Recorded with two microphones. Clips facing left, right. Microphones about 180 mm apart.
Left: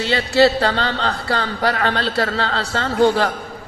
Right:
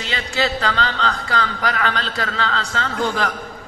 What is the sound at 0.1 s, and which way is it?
A man's voice, 35° left (ahead or behind).